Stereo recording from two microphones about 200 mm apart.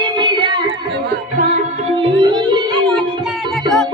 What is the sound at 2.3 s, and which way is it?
Music, 20° right (ahead or behind).